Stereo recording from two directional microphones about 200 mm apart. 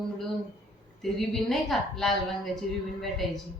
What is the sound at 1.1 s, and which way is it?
A woman's voice, centre (ahead or behind).